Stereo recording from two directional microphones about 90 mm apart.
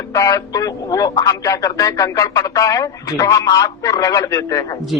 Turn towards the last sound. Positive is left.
turn(degrees=35)  # may be behind; listen again after turning